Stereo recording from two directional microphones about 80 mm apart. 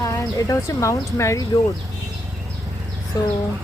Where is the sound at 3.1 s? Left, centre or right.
Left.